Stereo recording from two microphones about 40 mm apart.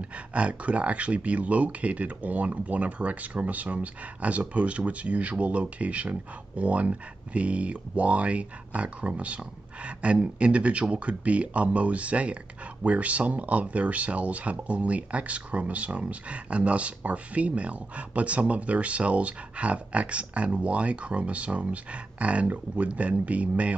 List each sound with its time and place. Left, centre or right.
0.0 s speech: right